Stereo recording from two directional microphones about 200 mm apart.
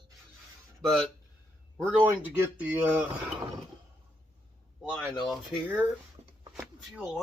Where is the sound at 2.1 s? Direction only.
10° right (ahead or behind).